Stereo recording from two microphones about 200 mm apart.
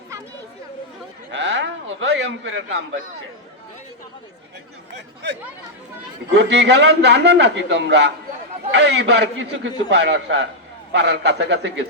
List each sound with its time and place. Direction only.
1.3 s a man's voice: 60° right (ahead or behind)
4.9 s a man's voice: 60° right (ahead or behind)